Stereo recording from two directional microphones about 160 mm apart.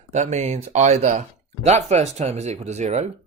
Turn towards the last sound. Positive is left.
turn(degrees=-45)  # may be behind; listen again after turning